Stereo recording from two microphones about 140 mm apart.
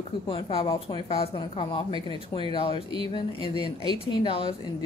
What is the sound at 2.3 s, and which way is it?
Speech, 25° left (ahead or behind).